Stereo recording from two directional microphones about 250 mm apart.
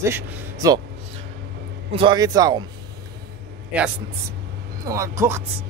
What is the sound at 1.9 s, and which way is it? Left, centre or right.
Speech, centre.